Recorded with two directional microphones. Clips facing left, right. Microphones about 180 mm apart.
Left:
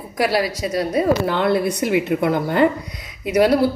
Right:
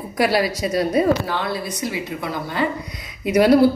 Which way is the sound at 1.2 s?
55° left (ahead or behind).